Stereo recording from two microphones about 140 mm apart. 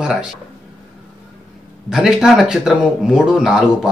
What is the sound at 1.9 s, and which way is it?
Speech, 5° right (ahead or behind).